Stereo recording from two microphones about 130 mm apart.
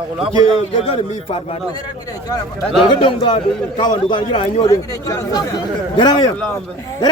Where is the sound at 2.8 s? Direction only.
35° left (ahead or behind).